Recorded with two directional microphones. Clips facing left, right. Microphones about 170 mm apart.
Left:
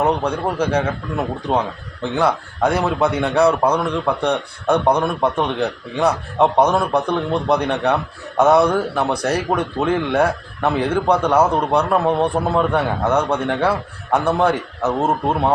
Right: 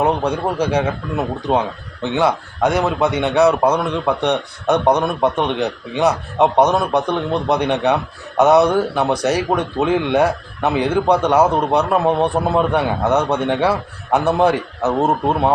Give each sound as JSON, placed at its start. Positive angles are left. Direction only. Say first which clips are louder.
{"t": 0.0, "sound": "a man's voice", "louder": "right 1 dB", "side_deg": -10}